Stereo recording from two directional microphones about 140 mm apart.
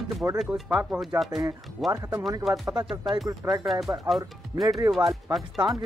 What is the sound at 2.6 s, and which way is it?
Speech, 25° right (ahead or behind).